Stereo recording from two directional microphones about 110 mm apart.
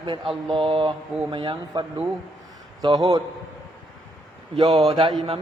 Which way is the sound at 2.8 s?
40° right (ahead or behind).